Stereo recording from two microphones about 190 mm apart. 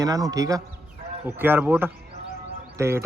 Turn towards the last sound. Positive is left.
turn(degrees=-15)  # may be behind; listen again after turning